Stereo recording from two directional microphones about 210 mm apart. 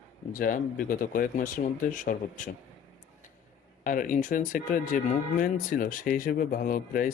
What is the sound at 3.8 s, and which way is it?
Speech, 40° left (ahead or behind).